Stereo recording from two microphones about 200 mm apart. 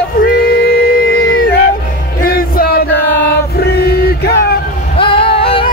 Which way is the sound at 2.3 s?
45° left (ahead or behind).